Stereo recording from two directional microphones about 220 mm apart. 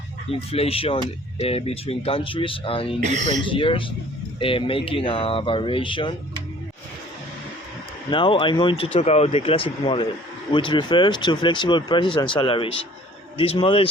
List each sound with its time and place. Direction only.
0.3 s speech: 25° left (ahead or behind)
3.0 s speech: 30° right (ahead or behind)
3.4 s speech: 25° left (ahead or behind)
8.1 s speech: 20° left (ahead or behind)